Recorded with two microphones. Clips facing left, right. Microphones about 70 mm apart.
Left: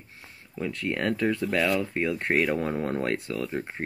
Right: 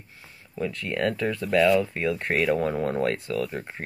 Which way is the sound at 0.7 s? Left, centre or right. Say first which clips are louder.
Even; left.